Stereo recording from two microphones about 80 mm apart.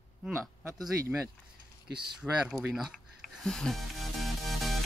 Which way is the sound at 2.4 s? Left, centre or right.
Centre.